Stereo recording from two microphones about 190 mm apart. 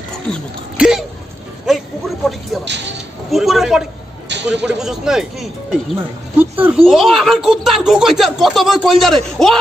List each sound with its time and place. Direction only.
0.3 s speech: 5° right (ahead or behind)
1.7 s a sound: centre (ahead or behind)
2.6 s speech: 70° right (ahead or behind)
3.3 s speech: centre (ahead or behind)